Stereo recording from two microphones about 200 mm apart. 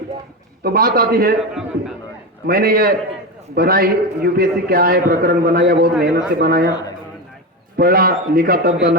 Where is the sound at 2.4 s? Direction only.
50° right (ahead or behind).